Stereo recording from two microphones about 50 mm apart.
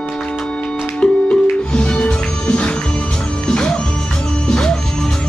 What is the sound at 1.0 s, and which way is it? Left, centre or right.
Music, left.